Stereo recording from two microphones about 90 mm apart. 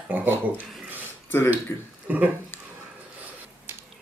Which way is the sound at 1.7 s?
30° left (ahead or behind).